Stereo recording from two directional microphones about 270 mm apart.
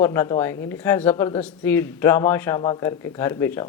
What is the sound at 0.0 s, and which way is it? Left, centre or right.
Speech, centre.